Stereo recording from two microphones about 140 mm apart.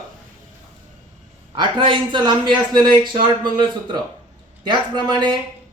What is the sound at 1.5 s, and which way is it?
A man's voice, 35° right (ahead or behind).